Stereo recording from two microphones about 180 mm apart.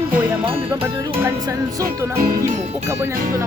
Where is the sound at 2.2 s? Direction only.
50° right (ahead or behind).